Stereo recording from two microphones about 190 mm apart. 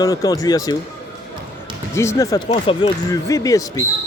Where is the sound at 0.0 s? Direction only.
20° left (ahead or behind).